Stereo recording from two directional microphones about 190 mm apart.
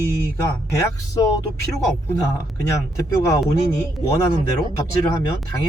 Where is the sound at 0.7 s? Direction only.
20° left (ahead or behind).